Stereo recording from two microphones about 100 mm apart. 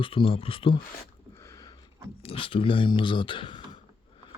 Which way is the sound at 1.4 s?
30° left (ahead or behind).